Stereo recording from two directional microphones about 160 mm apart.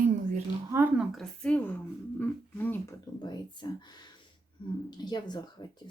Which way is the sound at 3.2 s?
25° left (ahead or behind).